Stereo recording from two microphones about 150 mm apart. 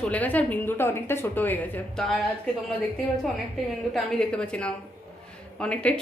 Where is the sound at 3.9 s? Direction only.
5° left (ahead or behind).